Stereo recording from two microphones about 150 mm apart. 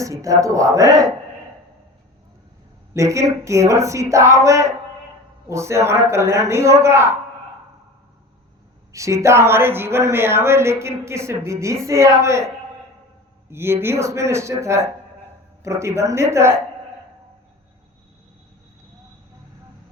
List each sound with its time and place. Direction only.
0.0 s speech: 20° right (ahead or behind)
2.9 s speech: 20° right (ahead or behind)
8.9 s speech: 20° right (ahead or behind)
13.5 s speech: 15° right (ahead or behind)